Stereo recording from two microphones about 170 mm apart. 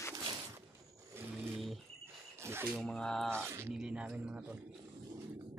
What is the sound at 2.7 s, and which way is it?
Speech, 5° left (ahead or behind).